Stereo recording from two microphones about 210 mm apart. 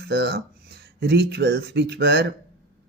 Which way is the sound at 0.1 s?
55° right (ahead or behind).